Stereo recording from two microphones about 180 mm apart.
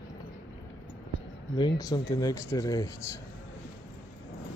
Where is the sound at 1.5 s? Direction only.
20° left (ahead or behind).